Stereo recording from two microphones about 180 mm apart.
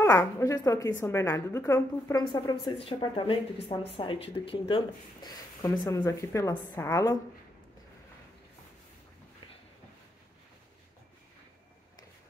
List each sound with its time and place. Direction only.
0.0 s a woman's voice: 15° left (ahead or behind)